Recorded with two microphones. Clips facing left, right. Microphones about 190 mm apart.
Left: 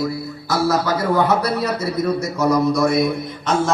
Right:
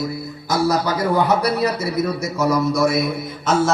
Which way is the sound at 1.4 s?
10° right (ahead or behind).